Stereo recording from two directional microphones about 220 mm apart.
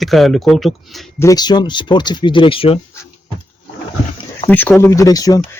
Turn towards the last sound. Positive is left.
turn(degrees=15)  # may be behind; listen again after turning